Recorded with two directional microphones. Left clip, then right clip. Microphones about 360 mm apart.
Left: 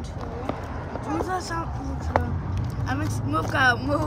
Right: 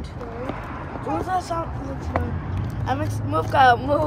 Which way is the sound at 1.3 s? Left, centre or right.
Centre.